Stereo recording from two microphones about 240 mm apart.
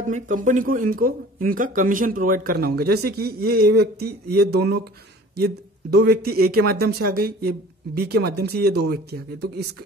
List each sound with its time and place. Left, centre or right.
0.1 s speech: right